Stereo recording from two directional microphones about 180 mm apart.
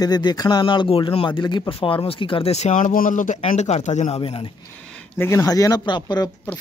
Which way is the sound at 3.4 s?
35° left (ahead or behind).